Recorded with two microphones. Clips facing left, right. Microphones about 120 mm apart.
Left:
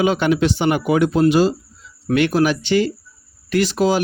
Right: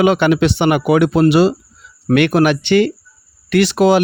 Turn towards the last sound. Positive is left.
turn(degrees=-70)  # may be behind; listen again after turning